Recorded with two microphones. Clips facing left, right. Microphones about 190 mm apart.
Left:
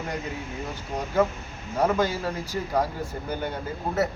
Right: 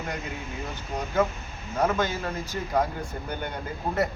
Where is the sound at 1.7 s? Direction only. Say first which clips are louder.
Left 2 dB; 10° left (ahead or behind).